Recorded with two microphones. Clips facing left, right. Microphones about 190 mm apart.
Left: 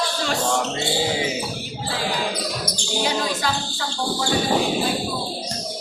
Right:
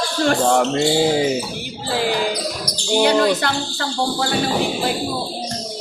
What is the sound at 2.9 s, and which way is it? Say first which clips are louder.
Speech: right 9 dB; 65° right (ahead or behind).